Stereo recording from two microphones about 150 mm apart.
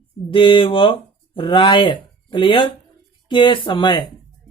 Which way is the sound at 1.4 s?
35° left (ahead or behind).